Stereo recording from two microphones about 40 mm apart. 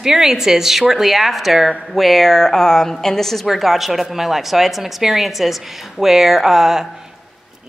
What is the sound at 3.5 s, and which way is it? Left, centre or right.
A woman's voice, centre.